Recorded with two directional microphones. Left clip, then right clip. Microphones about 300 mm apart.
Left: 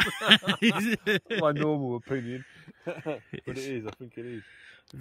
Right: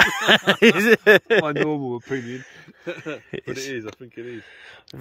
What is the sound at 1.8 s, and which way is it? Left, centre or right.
Speech, left.